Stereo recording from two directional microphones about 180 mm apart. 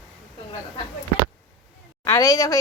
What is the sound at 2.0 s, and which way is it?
Speech, 20° left (ahead or behind).